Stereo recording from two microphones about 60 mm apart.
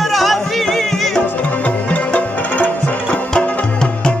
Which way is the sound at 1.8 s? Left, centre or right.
Left.